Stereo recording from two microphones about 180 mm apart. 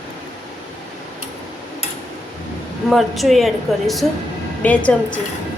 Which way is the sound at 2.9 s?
Centre (ahead or behind).